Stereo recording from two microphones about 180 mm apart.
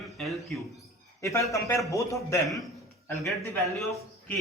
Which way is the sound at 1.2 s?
15° left (ahead or behind).